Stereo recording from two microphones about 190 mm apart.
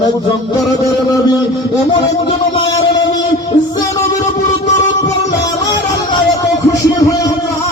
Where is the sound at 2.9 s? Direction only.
20° left (ahead or behind).